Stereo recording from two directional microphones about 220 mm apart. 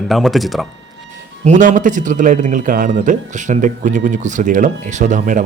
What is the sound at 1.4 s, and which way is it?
Speech, 35° right (ahead or behind).